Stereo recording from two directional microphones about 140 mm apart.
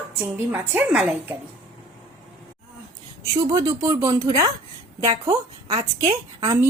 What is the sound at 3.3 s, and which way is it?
Speech, 20° right (ahead or behind).